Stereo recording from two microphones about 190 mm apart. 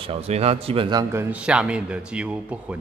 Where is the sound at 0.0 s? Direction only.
30° right (ahead or behind).